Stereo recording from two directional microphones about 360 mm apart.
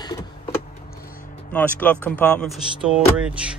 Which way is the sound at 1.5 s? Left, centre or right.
Centre.